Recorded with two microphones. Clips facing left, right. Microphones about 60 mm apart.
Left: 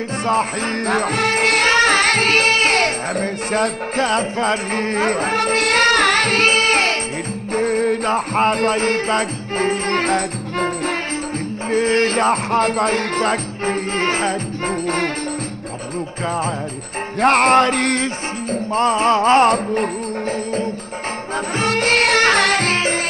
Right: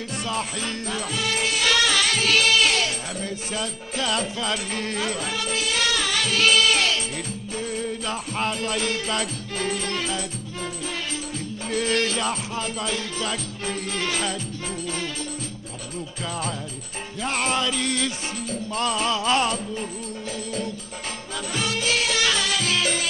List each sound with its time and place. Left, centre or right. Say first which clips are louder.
0.2 s music: left 10 dB; left
11.7 s music: left 7 dB; left
17.2 s music: left 12 dB; left
18.0 s music: left 6 dB; left
21.5 s music: left 8 dB; left